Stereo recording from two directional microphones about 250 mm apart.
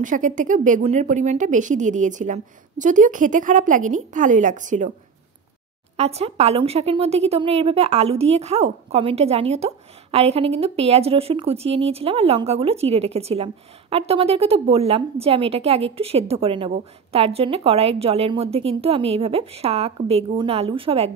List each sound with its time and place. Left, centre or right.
0.0 s speech: right
5.9 s a woman's voice: right